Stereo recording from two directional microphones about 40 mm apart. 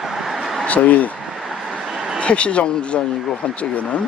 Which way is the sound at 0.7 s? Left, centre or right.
Left.